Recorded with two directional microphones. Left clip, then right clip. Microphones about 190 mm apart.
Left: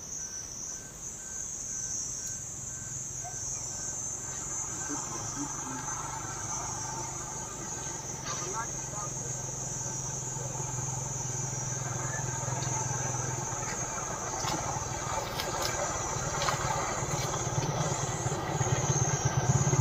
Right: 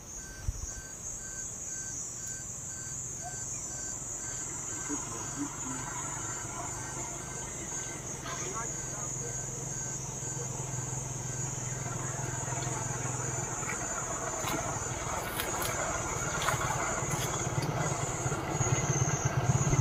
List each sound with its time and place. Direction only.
14.4 s vehicle: 20° right (ahead or behind)